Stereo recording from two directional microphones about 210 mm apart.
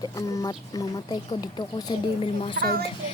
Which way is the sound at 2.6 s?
45° right (ahead or behind).